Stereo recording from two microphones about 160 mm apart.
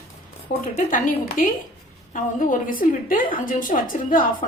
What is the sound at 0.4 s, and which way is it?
A woman's voice, 55° left (ahead or behind).